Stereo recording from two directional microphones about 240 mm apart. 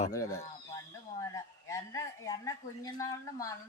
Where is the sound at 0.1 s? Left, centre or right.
Centre.